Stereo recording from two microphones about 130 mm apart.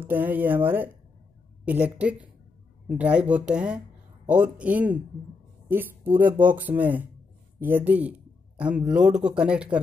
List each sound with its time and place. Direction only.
0.0 s a man's voice: 15° right (ahead or behind)